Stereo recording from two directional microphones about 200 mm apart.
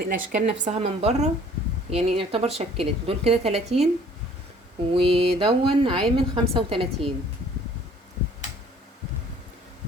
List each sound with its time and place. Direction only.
0.0 s a woman's voice: 45° right (ahead or behind)
4.9 s a woman's voice: 30° right (ahead or behind)